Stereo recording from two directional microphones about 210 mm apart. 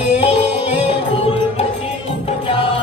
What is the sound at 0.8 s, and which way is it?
Music, 25° left (ahead or behind).